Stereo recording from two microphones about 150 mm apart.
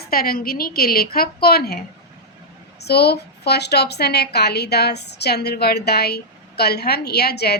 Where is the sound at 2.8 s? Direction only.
90° left.